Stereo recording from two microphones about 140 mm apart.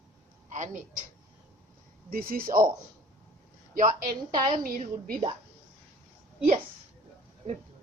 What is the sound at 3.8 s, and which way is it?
A woman's voice, 70° right (ahead or behind).